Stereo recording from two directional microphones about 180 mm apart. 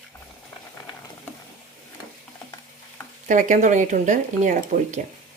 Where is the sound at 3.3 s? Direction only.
45° right (ahead or behind).